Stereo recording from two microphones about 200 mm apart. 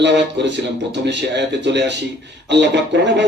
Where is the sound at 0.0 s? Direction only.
60° right (ahead or behind).